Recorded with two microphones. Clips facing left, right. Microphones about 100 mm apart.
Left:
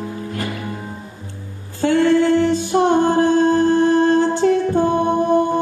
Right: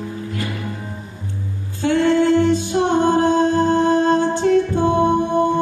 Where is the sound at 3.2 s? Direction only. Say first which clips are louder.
Left 1 dB; 20° right (ahead or behind).